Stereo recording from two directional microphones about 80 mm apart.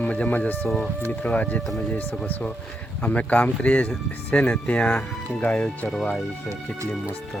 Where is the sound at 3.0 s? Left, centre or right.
Centre.